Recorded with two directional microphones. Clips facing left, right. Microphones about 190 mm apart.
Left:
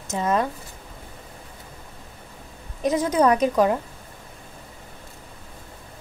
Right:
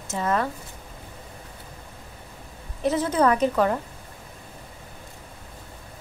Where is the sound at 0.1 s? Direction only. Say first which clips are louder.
Left 2 dB; 20° left (ahead or behind).